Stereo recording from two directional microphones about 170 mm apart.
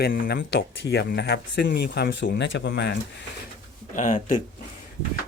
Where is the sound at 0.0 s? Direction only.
70° left (ahead or behind); by 2.9 s 90° left.